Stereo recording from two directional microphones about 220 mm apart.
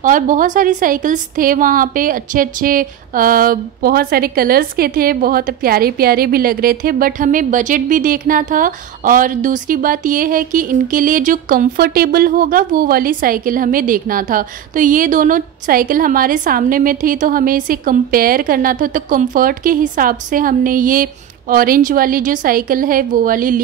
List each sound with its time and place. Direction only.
0.0 s a woman's voice: 35° right (ahead or behind)